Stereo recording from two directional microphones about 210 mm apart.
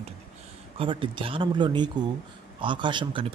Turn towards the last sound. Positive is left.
turn(degrees=-25)  # may be behind; listen again after turning